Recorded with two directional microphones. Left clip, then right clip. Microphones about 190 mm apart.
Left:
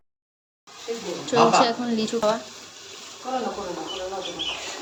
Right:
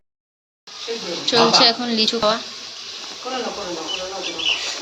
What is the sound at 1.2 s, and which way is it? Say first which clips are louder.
Speech: right 4 dB; 5° left (ahead or behind).